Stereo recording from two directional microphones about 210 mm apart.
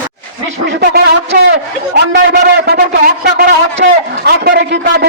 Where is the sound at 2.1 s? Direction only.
55° right (ahead or behind).